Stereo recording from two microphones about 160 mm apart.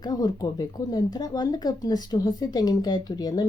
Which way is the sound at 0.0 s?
25° left (ahead or behind).